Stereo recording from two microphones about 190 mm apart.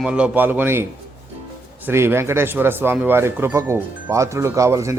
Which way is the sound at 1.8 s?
10° right (ahead or behind).